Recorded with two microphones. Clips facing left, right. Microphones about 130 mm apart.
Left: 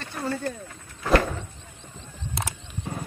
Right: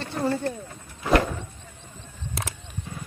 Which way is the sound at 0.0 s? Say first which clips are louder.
Right 4 dB; 25° right (ahead or behind).